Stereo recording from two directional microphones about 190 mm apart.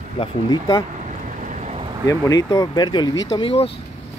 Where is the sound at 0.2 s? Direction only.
25° left (ahead or behind).